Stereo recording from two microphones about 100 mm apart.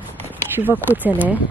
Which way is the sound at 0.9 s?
15° right (ahead or behind).